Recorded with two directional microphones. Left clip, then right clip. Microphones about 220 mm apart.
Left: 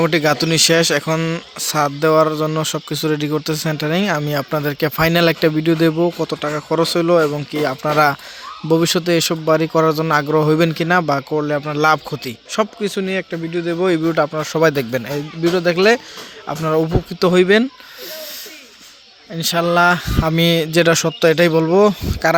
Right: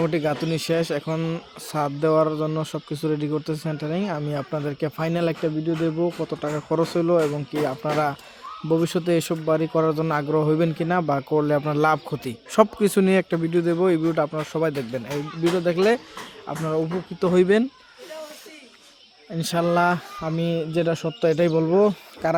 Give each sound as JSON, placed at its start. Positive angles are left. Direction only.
{"t": 0.0, "sound": "a man's voice", "side_deg": 5}
{"t": 5.5, "sound": "speech", "side_deg": 20}
{"t": 6.4, "sound": "a man's voice", "side_deg": 5}
{"t": 12.5, "sound": "a man's voice", "side_deg": -20}
{"t": 13.7, "sound": "a man's voice", "side_deg": 0}
{"t": 16.5, "sound": "speech", "side_deg": 15}
{"t": 17.3, "sound": "a man's voice", "side_deg": 0}
{"t": 19.3, "sound": "a man's voice", "side_deg": 0}
{"t": 20.2, "sound": "speech", "side_deg": 15}